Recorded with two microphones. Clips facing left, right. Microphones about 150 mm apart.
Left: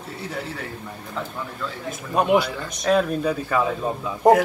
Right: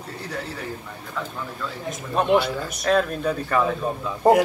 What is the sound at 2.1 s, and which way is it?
Speech, 5° left (ahead or behind).